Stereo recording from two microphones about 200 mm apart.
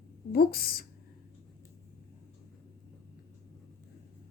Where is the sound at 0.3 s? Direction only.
50° left (ahead or behind).